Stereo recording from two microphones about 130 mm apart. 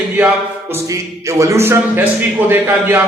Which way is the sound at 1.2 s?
25° right (ahead or behind).